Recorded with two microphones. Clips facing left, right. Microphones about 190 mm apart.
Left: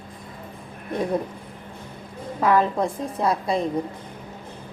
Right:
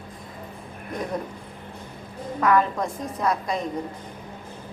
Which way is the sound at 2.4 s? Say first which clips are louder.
Left 1 dB; 30° left (ahead or behind).